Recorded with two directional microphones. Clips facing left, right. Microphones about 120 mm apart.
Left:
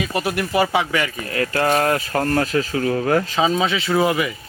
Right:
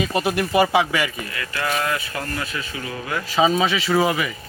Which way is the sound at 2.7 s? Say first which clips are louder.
Left 10 dB; 70° left (ahead or behind).